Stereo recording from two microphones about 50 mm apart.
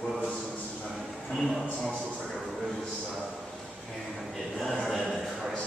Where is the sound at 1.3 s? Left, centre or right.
Centre.